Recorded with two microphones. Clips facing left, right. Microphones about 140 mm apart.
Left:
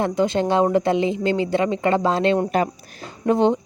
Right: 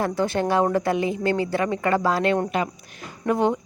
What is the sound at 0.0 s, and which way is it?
Speech, 20° left (ahead or behind).